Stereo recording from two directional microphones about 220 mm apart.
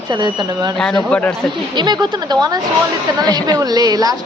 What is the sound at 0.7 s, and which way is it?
Speech, centre (ahead or behind).